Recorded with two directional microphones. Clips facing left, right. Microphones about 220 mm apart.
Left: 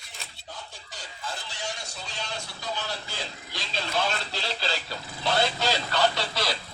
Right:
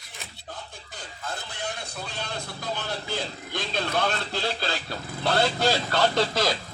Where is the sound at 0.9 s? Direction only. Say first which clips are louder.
Right 2 dB; 55° right (ahead or behind).